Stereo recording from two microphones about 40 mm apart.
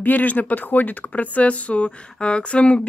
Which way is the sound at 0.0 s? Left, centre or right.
Left.